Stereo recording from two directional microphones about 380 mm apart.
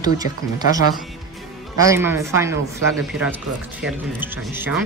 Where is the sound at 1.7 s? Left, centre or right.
Centre.